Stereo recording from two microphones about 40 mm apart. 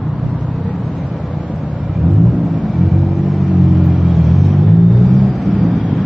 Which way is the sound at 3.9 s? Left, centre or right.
Centre.